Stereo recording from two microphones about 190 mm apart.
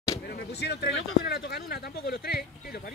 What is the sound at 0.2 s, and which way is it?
Speech, 55° left (ahead or behind).